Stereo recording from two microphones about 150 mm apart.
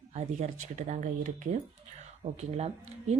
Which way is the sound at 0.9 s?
60° right (ahead or behind).